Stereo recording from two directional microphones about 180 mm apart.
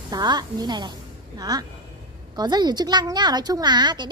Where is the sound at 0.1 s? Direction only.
20° right (ahead or behind).